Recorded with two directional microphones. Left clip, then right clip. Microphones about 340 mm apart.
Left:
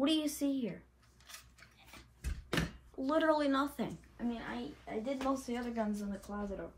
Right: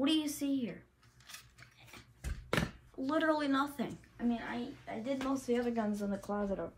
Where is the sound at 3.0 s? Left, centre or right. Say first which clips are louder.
Left 1 dB; centre.